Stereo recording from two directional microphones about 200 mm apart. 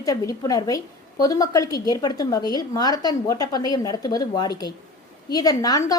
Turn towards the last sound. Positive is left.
turn(degrees=20)  # may be behind; listen again after turning